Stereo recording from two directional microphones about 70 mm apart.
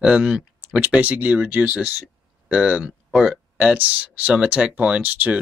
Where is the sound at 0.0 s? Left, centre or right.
Centre.